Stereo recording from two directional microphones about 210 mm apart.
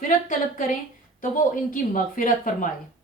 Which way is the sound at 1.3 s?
40° left (ahead or behind).